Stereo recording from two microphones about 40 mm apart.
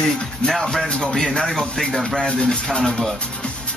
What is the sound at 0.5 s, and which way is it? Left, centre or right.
Speech, centre.